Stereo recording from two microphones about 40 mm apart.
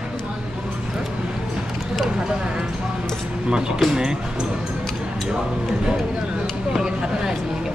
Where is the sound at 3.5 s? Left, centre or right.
Centre.